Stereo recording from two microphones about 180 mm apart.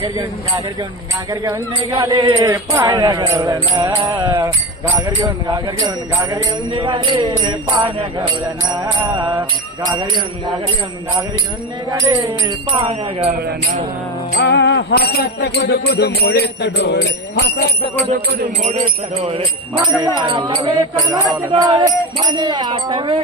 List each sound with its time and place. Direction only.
0.0 s speech: 25° right (ahead or behind)
8.7 s speech: 25° right (ahead or behind)
11.9 s speech: 20° right (ahead or behind)
12.9 s jingle bell: 35° right (ahead or behind)
14.3 s jingle bell: 75° left (ahead or behind)
18.6 s jingle bell: 40° right (ahead or behind)
20.1 s speech: 25° right (ahead or behind)